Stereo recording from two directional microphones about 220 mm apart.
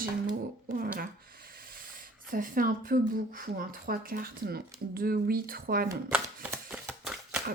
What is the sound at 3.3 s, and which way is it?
A woman's voice, 40° right (ahead or behind).